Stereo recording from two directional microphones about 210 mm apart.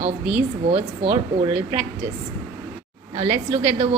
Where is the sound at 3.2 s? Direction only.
30° right (ahead or behind).